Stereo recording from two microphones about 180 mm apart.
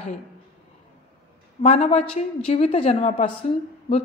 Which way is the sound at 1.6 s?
35° left (ahead or behind).